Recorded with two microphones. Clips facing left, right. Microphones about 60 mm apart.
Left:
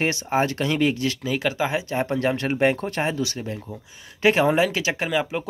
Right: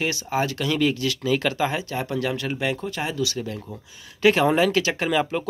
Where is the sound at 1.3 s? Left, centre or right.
Centre.